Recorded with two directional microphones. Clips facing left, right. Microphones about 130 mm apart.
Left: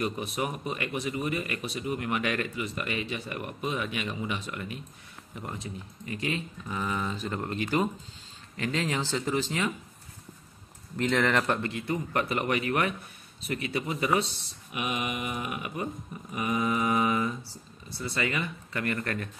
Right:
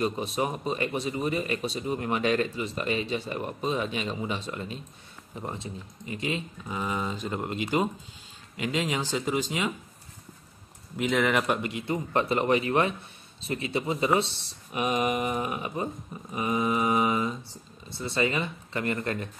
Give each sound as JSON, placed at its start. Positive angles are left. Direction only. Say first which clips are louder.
{"t": 0.0, "sound": "speech", "louder": "right 3 dB", "side_deg": -25}
{"t": 11.0, "sound": "speech", "louder": "right 1 dB", "side_deg": -5}
{"t": 14.7, "sound": "speech", "louder": "right 6 dB", "side_deg": -35}